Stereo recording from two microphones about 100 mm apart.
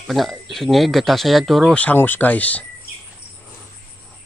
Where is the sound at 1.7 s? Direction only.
15° left (ahead or behind).